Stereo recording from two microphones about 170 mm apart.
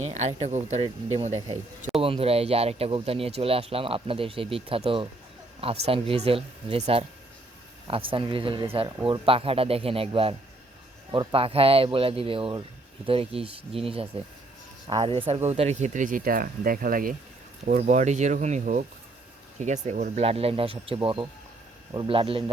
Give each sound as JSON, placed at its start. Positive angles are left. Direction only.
{"t": 0.0, "sound": "speech", "side_deg": -40}
{"t": 15.4, "sound": "speech", "side_deg": -40}
{"t": 17.7, "sound": "speech", "side_deg": -45}